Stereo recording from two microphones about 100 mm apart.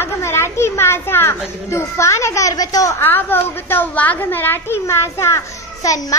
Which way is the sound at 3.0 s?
20° left (ahead or behind).